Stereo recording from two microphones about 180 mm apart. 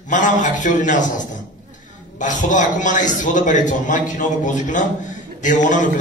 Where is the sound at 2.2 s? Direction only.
45° left (ahead or behind).